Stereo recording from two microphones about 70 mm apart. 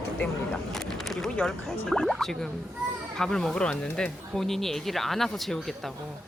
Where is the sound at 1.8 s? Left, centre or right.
Centre.